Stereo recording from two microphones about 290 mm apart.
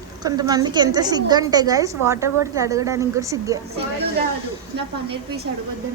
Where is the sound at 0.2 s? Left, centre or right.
Centre.